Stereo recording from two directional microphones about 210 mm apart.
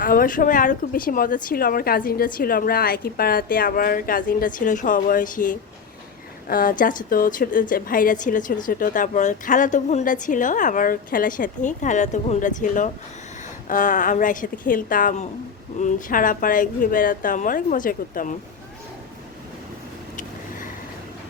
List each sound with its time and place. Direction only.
0.0 s a woman's voice: 40° left (ahead or behind)